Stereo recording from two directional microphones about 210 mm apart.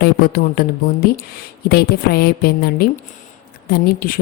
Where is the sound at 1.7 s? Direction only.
50° left (ahead or behind).